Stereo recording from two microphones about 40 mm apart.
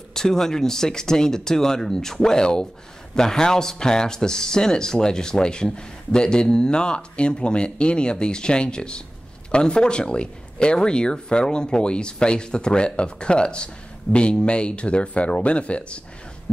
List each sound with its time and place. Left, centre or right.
0.1 s speech: centre; by 16.0 s left